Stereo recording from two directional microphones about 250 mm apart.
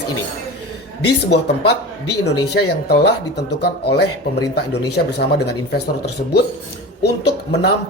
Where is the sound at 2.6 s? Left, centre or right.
Left.